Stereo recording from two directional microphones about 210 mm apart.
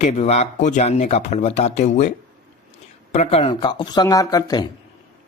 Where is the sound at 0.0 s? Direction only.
30° left (ahead or behind).